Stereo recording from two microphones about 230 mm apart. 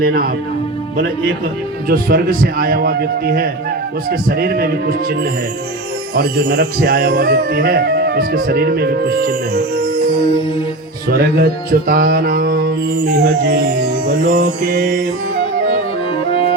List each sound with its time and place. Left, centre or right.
0.0 s music: right
1.9 s music: right
11.1 s music: right
16.3 s music: left